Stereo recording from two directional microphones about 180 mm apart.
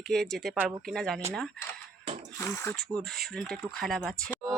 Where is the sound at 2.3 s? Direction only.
15° left (ahead or behind).